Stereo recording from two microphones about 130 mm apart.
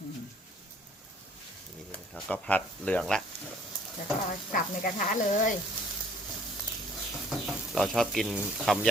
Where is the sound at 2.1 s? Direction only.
Centre (ahead or behind).